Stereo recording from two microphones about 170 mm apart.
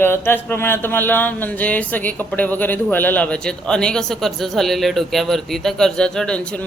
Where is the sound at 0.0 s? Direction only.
15° left (ahead or behind).